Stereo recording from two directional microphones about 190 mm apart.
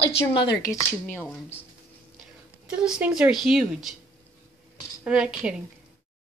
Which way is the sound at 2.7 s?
5° right (ahead or behind).